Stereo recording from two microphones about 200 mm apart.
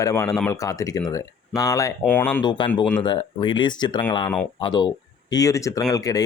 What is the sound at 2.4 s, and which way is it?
Speech, 20° left (ahead or behind).